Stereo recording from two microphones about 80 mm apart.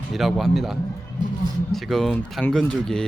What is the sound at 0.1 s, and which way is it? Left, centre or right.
A man's voice, centre.